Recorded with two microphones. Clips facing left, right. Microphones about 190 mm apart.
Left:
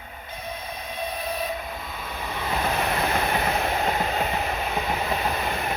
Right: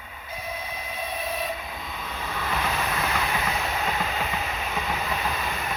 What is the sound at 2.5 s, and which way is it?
Train, 35° left (ahead or behind).